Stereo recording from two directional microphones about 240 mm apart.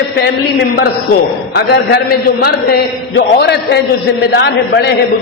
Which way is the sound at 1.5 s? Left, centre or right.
Left.